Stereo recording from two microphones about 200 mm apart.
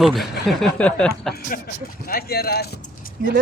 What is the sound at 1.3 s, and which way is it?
Speech, 45° left (ahead or behind).